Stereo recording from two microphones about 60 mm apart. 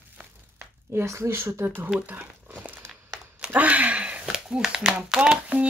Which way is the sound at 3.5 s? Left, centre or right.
Right.